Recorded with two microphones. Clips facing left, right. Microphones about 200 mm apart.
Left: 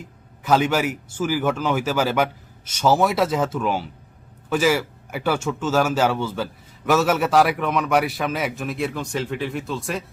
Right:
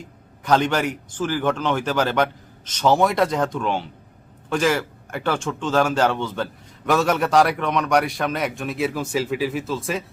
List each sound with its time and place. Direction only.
0.4 s a man's voice: 5° left (ahead or behind)